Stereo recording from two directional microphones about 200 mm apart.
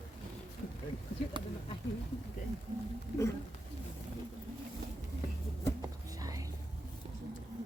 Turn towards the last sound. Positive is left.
turn(degrees=-15)  # may be behind; listen again after turning